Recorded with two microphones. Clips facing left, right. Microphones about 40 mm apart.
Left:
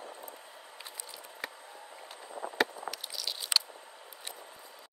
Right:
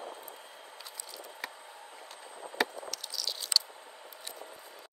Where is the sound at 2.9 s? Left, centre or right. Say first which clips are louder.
Left 1 dB; centre.